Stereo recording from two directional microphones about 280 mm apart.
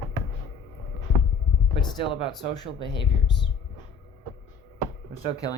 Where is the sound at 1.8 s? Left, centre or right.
Centre.